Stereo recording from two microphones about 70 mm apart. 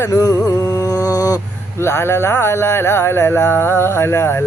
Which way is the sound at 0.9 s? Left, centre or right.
Left.